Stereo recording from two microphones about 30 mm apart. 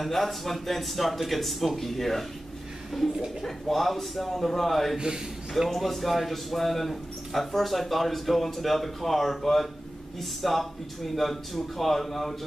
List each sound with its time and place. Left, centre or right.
0.0 s a man's voice: centre
3.4 s a man's voice: centre
4.9 s a man's voice: right
5.7 s a man's voice: centre